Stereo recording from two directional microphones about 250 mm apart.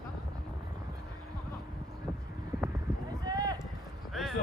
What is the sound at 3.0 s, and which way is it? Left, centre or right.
Run, centre.